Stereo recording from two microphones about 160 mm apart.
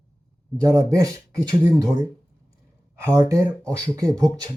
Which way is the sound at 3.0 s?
20° right (ahead or behind).